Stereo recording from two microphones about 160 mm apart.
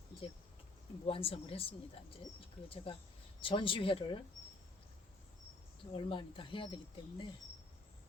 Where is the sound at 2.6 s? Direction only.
35° left (ahead or behind).